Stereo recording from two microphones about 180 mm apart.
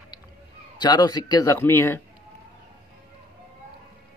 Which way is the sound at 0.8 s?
25° left (ahead or behind).